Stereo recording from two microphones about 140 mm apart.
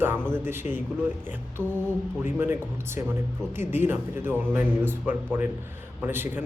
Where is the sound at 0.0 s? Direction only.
15° right (ahead or behind).